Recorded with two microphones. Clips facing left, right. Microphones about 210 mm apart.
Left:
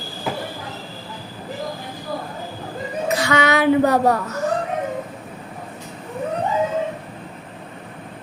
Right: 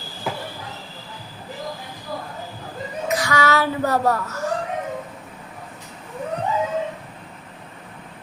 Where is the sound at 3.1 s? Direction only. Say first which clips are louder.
Left 2 dB; 25° left (ahead or behind).